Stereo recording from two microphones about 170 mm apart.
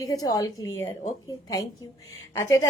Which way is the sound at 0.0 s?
20° left (ahead or behind).